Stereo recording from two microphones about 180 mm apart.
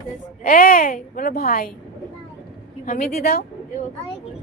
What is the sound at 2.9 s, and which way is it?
Speech, 55° left (ahead or behind).